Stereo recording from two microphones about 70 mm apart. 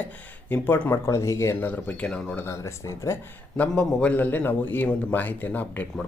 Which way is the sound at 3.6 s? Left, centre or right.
Left.